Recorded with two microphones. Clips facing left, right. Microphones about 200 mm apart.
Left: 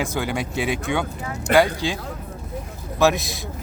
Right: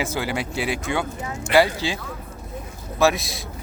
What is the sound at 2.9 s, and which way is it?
Speech, centre (ahead or behind).